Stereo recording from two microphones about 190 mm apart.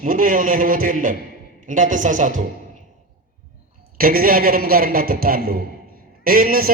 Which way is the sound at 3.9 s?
50° right (ahead or behind).